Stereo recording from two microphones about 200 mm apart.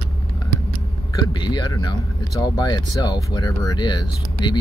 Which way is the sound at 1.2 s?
20° left (ahead or behind).